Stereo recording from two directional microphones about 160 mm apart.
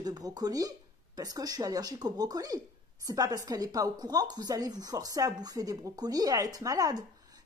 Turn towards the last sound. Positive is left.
turn(degrees=-25)  # may be behind; listen again after turning